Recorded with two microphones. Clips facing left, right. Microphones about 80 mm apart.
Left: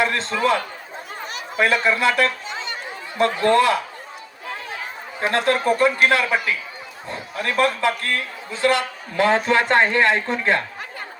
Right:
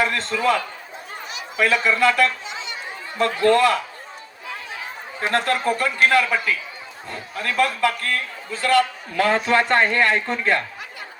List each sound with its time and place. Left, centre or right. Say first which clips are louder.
0.0 s a sound: left 1 dB; left
0.3 s speech: even; left
1.3 s a sound: left 1 dB; left
1.9 s speech: right 1 dB; left
2.5 s chatter: left 2 dB; left
3.2 s speech: even; left
5.5 s speech: left 4 dB; left